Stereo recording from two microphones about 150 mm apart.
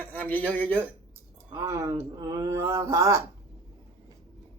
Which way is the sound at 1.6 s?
20° right (ahead or behind).